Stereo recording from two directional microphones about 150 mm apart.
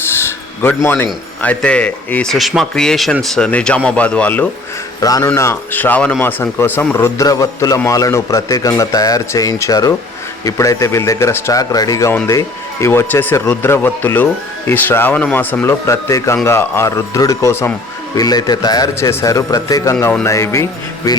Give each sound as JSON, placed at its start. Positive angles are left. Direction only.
{"t": 0.2, "sound": "speech", "side_deg": 15}
{"t": 4.9, "sound": "speech", "side_deg": 25}